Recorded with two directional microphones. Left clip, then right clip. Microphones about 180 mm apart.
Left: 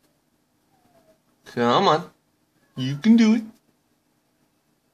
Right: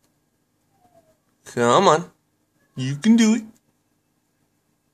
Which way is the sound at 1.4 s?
25° right (ahead or behind).